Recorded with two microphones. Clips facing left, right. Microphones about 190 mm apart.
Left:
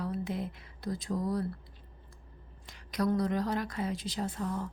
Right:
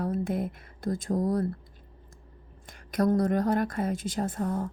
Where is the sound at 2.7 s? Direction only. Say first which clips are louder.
Right 5 dB; 50° right (ahead or behind).